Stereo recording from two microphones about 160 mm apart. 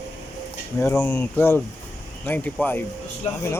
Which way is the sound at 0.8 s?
15° left (ahead or behind).